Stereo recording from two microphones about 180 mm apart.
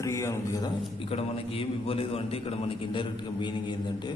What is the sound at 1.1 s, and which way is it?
A man's voice, 30° left (ahead or behind).